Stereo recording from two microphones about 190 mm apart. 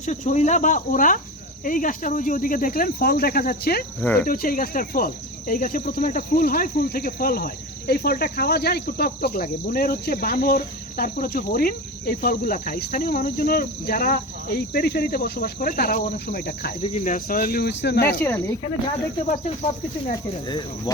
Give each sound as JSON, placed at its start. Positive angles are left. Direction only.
{"t": 0.0, "sound": "cricket", "side_deg": 35}
{"t": 4.0, "sound": "speech", "side_deg": 10}
{"t": 4.3, "sound": "cricket", "side_deg": 50}
{"t": 16.8, "sound": "cricket", "side_deg": 35}
{"t": 18.2, "sound": "speech", "side_deg": 15}